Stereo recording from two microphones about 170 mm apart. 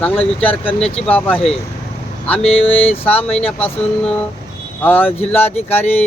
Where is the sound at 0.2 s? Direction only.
35° left (ahead or behind).